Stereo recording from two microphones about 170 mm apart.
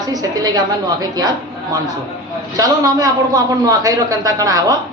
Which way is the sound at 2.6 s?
20° right (ahead or behind).